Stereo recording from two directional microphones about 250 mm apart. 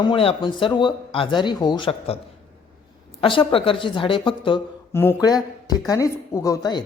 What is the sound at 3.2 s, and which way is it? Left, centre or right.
A woman's voice, left.